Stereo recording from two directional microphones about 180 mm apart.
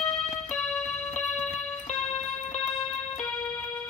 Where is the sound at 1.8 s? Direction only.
40° left (ahead or behind).